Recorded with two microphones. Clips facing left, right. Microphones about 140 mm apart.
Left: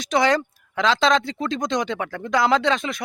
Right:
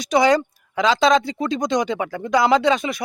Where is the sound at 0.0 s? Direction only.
Centre (ahead or behind).